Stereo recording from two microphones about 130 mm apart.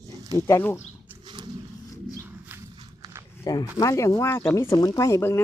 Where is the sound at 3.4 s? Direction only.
30° left (ahead or behind).